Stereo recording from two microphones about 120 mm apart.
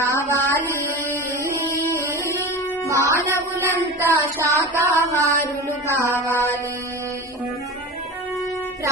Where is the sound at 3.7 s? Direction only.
20° right (ahead or behind).